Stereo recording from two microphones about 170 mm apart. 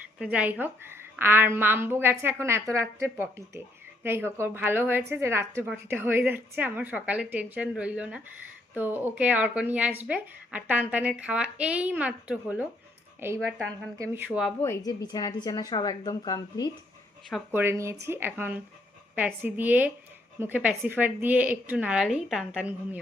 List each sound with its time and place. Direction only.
0.2 s a woman's voice: 10° right (ahead or behind)
14.6 s a woman's voice: 20° left (ahead or behind)
17.5 s a woman's voice: 15° right (ahead or behind)